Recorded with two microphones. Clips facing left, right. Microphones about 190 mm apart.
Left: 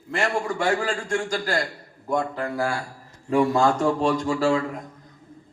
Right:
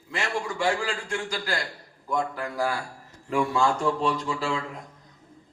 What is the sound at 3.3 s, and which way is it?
A man's voice, 40° left (ahead or behind).